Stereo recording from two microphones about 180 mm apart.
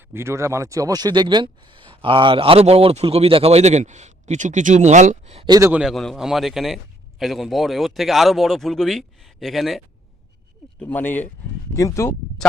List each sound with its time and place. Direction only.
0.1 s speech: 15° right (ahead or behind); by 5.5 s 35° right (ahead or behind)
5.5 s a man's voice: 15° right (ahead or behind)
5.8 s speech: centre (ahead or behind); by 12.1 s 15° left (ahead or behind)
12.4 s speech: 5° left (ahead or behind)